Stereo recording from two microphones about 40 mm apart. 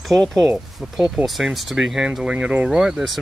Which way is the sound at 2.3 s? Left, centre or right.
Right.